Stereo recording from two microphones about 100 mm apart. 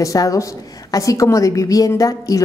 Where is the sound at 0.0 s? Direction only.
35° left (ahead or behind).